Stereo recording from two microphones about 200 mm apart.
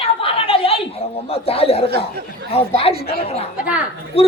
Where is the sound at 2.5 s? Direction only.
30° left (ahead or behind).